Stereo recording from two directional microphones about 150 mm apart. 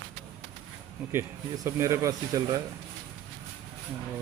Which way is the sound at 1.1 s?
20° right (ahead or behind).